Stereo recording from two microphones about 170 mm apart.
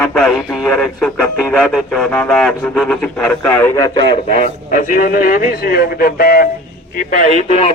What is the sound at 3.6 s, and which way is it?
A man's voice, 25° left (ahead or behind).